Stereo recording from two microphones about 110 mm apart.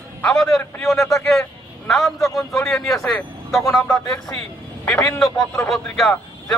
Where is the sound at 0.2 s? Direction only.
5° left (ahead or behind).